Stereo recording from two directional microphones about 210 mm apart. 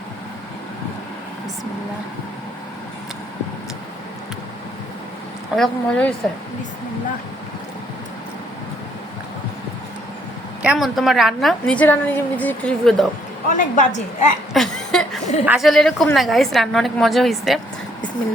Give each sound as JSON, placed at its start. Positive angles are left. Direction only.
{"t": 5.5, "sound": "a woman's voice", "side_deg": 5}
{"t": 10.6, "sound": "a woman's voice", "side_deg": -5}
{"t": 13.5, "sound": "a woman's voice", "side_deg": 35}
{"t": 14.5, "sound": "a sound", "side_deg": 0}
{"t": 15.4, "sound": "a woman's voice", "side_deg": 0}